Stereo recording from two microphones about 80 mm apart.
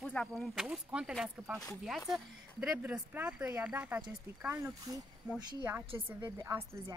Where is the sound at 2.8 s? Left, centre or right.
Centre.